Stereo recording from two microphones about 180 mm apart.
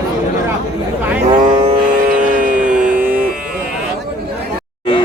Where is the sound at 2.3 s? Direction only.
50° right (ahead or behind).